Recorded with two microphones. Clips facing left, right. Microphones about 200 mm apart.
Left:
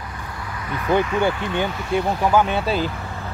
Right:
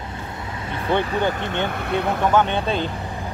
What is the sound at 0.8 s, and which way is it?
Speech, 30° right (ahead or behind).